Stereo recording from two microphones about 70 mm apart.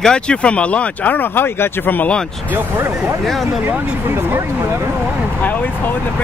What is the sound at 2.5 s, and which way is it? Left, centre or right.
Speech, right.